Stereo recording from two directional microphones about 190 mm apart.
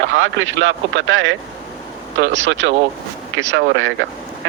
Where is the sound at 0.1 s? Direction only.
90° right.